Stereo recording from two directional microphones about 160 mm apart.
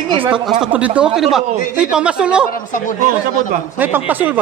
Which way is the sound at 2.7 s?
55° left (ahead or behind).